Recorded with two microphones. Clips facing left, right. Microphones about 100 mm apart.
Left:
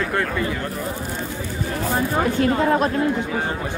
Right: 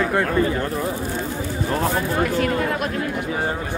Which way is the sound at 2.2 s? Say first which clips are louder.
Left 3 dB; 30° left (ahead or behind).